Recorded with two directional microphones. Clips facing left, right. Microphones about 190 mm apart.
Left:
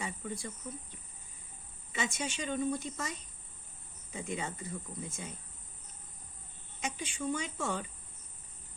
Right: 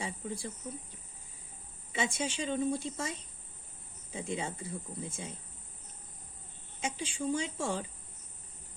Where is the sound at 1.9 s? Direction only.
30° right (ahead or behind).